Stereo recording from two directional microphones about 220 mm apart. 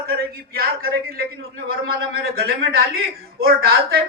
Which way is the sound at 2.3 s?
45° right (ahead or behind).